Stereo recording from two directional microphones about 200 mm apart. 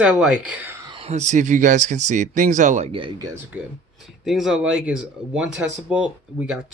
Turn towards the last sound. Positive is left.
turn(degrees=-5)  # may be behind; listen again after turning